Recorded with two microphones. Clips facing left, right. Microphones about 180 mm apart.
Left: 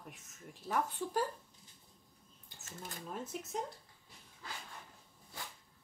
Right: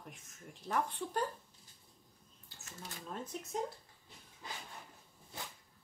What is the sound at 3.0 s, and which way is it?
Speech, 5° left (ahead or behind).